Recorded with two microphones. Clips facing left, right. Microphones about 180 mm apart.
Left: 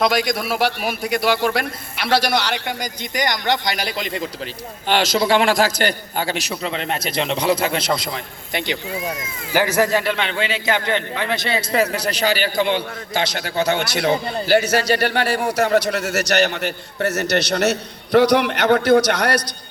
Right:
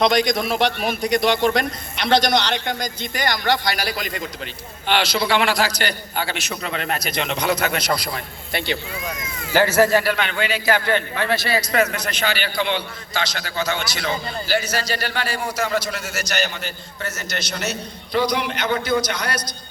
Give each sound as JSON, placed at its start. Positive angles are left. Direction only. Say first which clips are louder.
{"t": 0.0, "sound": "a man's voice", "louder": "right 1 dB", "side_deg": 5}
{"t": 4.9, "sound": "a man's voice", "louder": "left 3 dB", "side_deg": 45}
{"t": 9.5, "sound": "a man's voice", "louder": "right 2 dB", "side_deg": 15}